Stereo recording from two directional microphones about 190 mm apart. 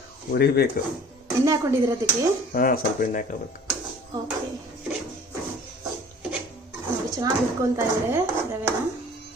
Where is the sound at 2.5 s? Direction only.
50° left (ahead or behind).